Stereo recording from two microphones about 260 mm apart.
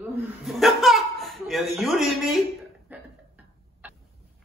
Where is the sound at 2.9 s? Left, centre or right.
Centre.